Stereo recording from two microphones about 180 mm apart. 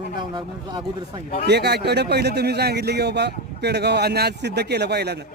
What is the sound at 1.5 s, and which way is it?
Speech, 65° right (ahead or behind).